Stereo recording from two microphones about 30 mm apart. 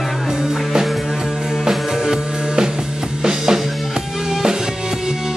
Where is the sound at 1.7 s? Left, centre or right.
Right.